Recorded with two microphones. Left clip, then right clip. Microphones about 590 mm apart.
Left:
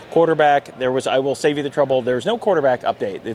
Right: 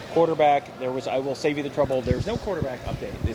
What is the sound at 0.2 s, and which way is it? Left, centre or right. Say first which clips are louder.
Speech: left 5 dB; left.